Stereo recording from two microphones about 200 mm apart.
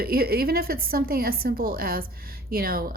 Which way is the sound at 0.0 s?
50° right (ahead or behind).